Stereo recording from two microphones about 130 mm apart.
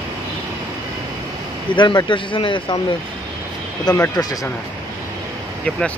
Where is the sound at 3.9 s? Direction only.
25° left (ahead or behind).